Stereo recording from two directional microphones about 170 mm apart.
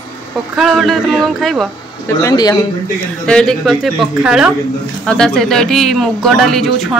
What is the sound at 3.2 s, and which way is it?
Speech, 5° left (ahead or behind).